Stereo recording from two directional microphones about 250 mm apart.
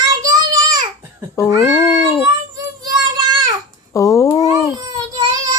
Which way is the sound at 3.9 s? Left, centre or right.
Centre.